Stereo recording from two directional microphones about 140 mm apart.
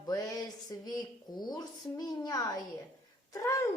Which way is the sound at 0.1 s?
25° left (ahead or behind).